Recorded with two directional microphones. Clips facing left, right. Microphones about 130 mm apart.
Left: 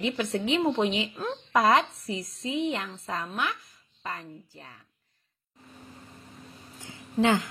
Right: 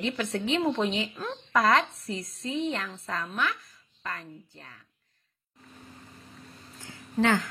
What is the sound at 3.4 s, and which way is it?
A woman's voice, 25° left (ahead or behind).